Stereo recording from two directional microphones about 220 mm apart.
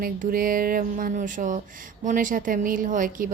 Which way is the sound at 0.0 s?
40° right (ahead or behind).